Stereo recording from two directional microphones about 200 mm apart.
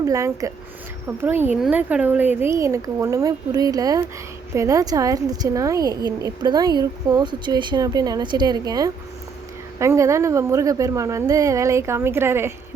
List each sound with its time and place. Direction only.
0.0 s a woman's voice: 15° right (ahead or behind)